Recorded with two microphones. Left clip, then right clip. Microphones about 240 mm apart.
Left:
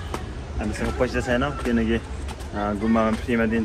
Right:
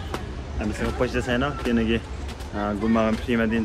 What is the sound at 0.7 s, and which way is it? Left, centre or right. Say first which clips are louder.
Speech: left 1 dB; centre.